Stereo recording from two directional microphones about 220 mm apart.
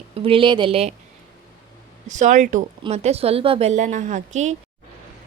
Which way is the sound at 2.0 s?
35° right (ahead or behind).